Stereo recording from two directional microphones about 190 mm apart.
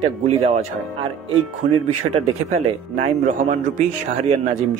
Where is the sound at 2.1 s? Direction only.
35° right (ahead or behind).